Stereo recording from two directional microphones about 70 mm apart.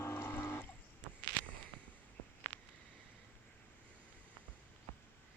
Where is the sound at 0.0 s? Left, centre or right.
Left.